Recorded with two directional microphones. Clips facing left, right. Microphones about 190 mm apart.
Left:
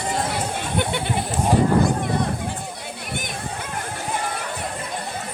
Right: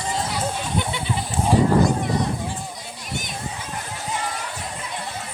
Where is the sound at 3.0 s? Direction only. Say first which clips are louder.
Even; 55° left (ahead or behind).